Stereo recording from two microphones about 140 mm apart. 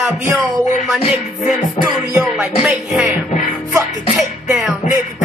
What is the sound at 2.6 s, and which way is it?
Music, 5° right (ahead or behind).